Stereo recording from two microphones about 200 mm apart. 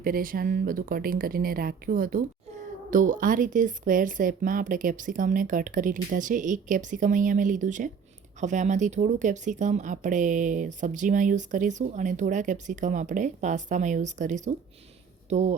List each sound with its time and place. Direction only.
0.0 s speech: 45° right (ahead or behind)